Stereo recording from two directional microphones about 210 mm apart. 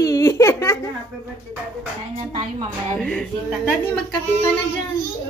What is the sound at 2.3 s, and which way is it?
Speech, 30° right (ahead or behind).